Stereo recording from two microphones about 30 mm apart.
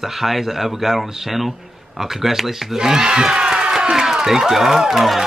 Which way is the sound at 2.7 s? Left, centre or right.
Right.